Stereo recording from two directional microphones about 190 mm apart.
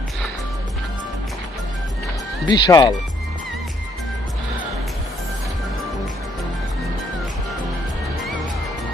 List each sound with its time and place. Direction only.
2.5 s speech: 20° left (ahead or behind)